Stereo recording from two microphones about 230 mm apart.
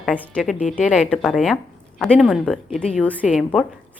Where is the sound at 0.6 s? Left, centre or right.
Left.